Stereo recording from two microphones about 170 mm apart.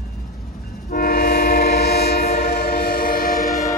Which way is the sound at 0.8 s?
60° left (ahead or behind).